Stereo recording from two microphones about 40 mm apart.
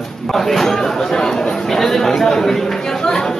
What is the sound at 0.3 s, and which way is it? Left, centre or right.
Chatter, centre.